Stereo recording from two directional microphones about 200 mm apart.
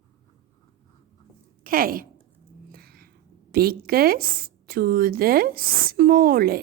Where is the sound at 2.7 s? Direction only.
50° right (ahead or behind).